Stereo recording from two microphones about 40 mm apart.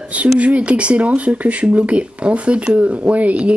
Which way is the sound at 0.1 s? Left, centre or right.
Right.